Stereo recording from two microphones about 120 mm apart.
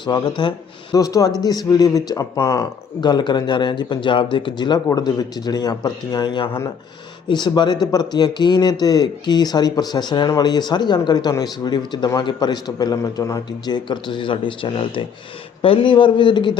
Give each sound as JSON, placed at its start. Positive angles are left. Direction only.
{"t": 0.0, "sound": "speech", "side_deg": 40}
{"t": 3.0, "sound": "a man's voice", "side_deg": 35}